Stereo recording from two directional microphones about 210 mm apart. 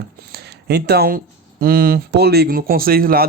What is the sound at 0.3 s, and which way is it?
Speech, 50° right (ahead or behind).